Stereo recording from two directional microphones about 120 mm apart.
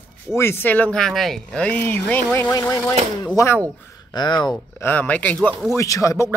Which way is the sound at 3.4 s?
30° left (ahead or behind).